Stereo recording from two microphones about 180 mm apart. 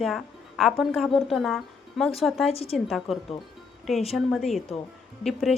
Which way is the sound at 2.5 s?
35° left (ahead or behind).